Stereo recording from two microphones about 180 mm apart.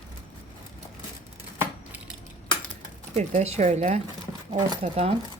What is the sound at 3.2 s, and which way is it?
Speech, 35° right (ahead or behind).